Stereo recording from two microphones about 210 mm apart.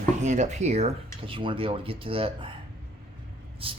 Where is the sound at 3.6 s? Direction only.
25° right (ahead or behind).